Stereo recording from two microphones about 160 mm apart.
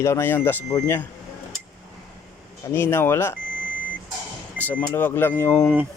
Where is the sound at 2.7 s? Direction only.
15° left (ahead or behind).